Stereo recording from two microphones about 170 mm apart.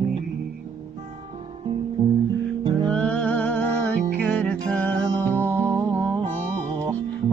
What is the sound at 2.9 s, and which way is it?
Music, 5° left (ahead or behind).